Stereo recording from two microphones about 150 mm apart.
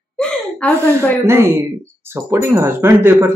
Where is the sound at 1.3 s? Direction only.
15° right (ahead or behind).